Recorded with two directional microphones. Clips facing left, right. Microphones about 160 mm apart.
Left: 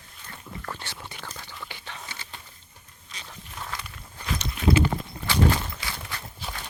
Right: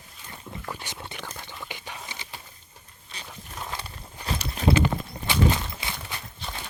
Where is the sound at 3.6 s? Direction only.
25° right (ahead or behind).